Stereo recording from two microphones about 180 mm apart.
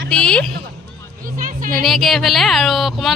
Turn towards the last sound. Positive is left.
turn(degrees=0)  # may be behind; listen again after turning